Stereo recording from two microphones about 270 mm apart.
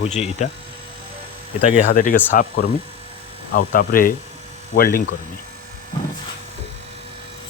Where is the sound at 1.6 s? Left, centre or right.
Left.